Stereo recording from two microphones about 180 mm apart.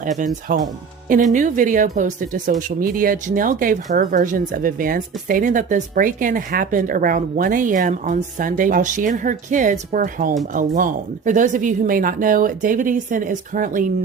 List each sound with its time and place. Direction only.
0.5 s speech: 45° right (ahead or behind)